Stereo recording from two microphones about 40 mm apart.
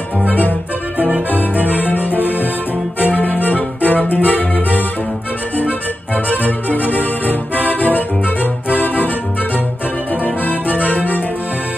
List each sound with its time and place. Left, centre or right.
0.3 s music: left
10.2 s music: left